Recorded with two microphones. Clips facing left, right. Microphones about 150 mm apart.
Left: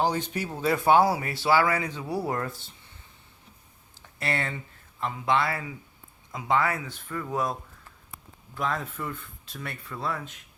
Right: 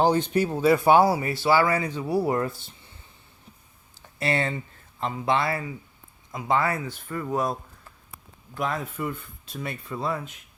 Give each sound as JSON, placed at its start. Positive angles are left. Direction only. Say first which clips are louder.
{"t": 0.0, "sound": "speech", "louder": "right 6 dB", "side_deg": -25}
{"t": 0.6, "sound": "speech", "louder": "right 2 dB", "side_deg": -10}
{"t": 4.2, "sound": "speech", "louder": "right 5 dB", "side_deg": -20}
{"t": 8.5, "sound": "speech", "louder": "right 2 dB", "side_deg": -10}